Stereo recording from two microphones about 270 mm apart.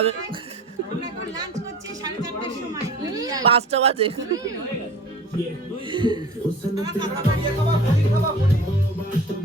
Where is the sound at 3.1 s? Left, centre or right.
Centre.